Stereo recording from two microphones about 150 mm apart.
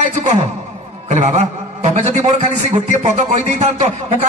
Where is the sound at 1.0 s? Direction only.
50° right (ahead or behind).